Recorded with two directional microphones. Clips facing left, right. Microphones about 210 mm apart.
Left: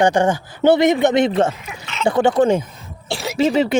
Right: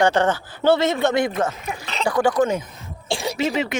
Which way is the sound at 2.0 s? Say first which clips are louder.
Left 4 dB; 25° left (ahead or behind).